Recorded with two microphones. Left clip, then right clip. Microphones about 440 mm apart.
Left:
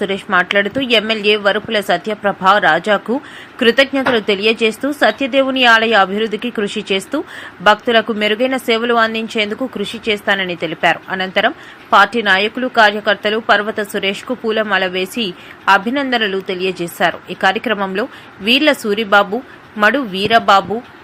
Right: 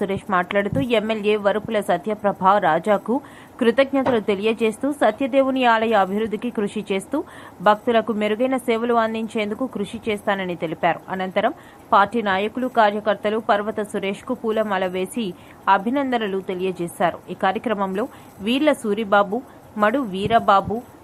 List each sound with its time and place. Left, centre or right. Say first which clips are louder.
0.0 s speech: left 6 dB; right